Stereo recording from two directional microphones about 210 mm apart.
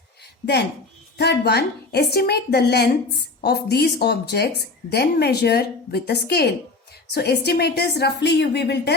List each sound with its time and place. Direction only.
1.2 s a woman's voice: 50° left (ahead or behind)